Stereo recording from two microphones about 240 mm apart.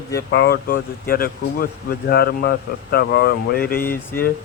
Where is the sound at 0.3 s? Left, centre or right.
Left.